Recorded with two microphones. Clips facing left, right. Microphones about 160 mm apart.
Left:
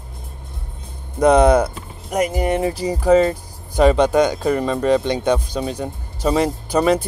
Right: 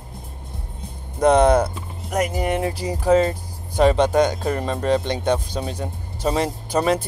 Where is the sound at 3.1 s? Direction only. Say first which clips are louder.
Left 3 dB; centre (ahead or behind).